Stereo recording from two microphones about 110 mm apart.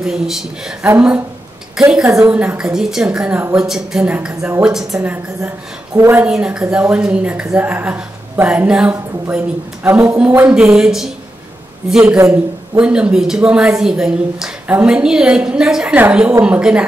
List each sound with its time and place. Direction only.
0.0 s speech: 5° right (ahead or behind)
1.8 s a woman's voice: 5° right (ahead or behind)
5.9 s a woman's voice: 20° right (ahead or behind)
6.2 s a woman's voice: 10° right (ahead or behind)